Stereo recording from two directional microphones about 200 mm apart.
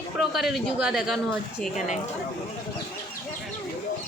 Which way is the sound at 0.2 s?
Centre (ahead or behind).